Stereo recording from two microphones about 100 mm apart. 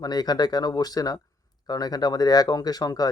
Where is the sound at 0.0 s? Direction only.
40° left (ahead or behind).